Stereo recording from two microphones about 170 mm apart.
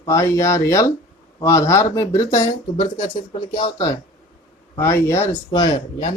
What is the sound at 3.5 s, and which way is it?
Speech, 25° left (ahead or behind).